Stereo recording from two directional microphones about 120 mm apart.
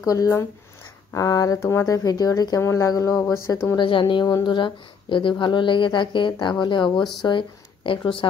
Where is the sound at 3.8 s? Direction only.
40° left (ahead or behind).